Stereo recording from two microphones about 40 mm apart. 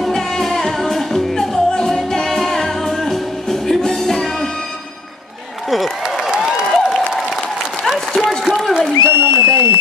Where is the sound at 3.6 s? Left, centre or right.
Centre.